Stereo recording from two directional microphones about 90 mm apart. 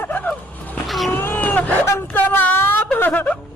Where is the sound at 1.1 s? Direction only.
20° left (ahead or behind).